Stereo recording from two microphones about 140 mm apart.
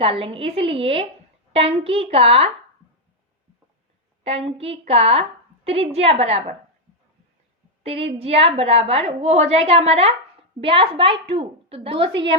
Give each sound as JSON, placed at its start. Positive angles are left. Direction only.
{"t": 0.0, "sound": "a woman's voice", "side_deg": -40}
{"t": 4.2, "sound": "a woman's voice", "side_deg": -45}
{"t": 7.9, "sound": "a woman's voice", "side_deg": -45}